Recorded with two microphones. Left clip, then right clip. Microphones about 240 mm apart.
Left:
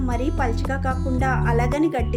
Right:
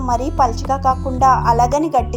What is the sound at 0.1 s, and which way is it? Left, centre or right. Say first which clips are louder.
A woman's voice: right 11 dB; centre.